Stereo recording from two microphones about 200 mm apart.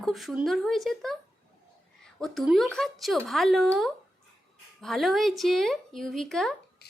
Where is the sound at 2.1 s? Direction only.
Centre (ahead or behind).